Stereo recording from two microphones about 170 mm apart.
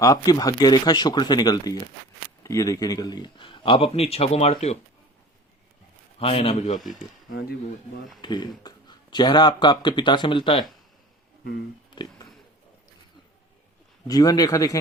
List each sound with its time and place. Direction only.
0.0 s speech: 20° left (ahead or behind); by 4.5 s 35° left (ahead or behind)
6.1 s a man's voice: 35° left (ahead or behind)
6.7 s speech: centre (ahead or behind)
8.2 s speech: 25° left (ahead or behind)
14.1 s speech: 20° left (ahead or behind)